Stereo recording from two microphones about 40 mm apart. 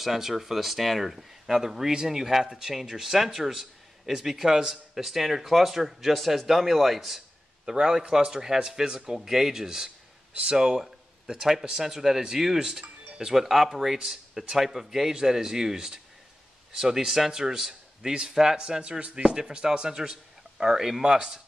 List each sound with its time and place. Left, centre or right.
0.0 s a man's voice: centre
7.6 s speech: centre
13.4 s speech: centre